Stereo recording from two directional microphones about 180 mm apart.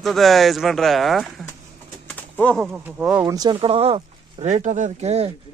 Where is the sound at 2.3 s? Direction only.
10° left (ahead or behind).